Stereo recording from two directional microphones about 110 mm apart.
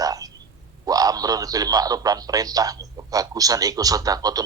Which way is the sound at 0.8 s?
35° right (ahead or behind).